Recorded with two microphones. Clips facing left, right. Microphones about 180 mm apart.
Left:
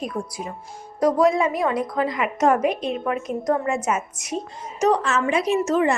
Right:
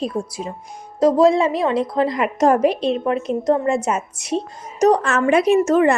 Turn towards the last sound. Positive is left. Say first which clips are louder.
# right 5 dB
turn(degrees=-55)  # may be behind; listen again after turning